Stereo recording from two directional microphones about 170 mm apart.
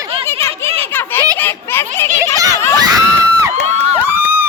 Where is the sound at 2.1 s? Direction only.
20° right (ahead or behind).